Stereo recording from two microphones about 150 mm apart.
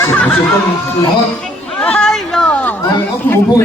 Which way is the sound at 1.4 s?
10° left (ahead or behind).